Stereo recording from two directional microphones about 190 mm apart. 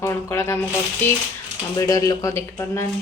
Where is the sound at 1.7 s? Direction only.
15° left (ahead or behind).